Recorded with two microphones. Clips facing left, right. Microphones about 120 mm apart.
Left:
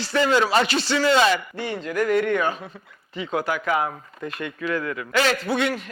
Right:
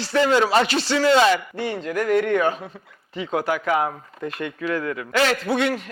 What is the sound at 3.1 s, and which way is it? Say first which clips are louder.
A man's voice: right 2 dB; 50° right (ahead or behind).